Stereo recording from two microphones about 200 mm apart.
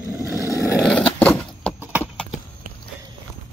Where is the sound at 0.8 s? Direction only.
5° left (ahead or behind).